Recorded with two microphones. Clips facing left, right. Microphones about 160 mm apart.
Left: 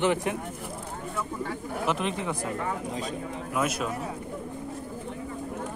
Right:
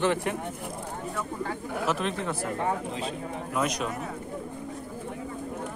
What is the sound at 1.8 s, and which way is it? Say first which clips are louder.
Speech: even; 15° left (ahead or behind).